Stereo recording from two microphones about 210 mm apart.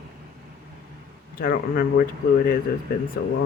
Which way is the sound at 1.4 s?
40° left (ahead or behind).